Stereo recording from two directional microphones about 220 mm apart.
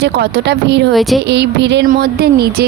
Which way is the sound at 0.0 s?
50° right (ahead or behind).